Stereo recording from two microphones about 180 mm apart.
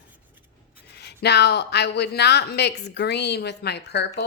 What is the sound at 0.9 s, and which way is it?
Speech, 65° left (ahead or behind).